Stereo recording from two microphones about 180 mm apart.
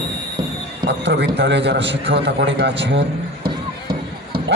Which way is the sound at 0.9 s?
70° right (ahead or behind).